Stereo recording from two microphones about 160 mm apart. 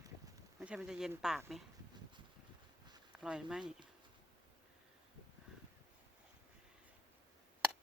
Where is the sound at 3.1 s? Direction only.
5° right (ahead or behind).